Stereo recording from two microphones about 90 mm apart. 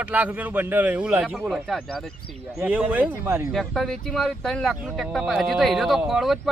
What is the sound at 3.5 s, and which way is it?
A man's voice, 5° left (ahead or behind).